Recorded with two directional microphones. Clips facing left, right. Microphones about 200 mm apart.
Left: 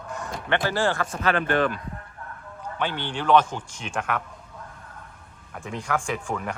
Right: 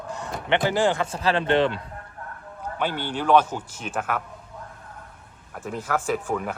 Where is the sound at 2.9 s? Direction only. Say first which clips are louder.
Right 1 dB; 10° right (ahead or behind).